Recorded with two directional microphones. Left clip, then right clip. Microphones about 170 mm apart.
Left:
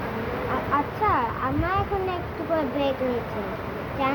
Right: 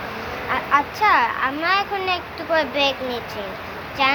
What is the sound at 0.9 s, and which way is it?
A child's voice, 25° left (ahead or behind).